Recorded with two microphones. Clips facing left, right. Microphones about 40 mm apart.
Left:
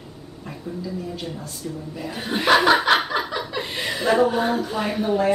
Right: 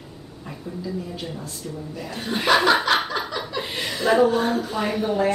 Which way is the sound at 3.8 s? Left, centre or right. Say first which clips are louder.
Left 3 dB; centre.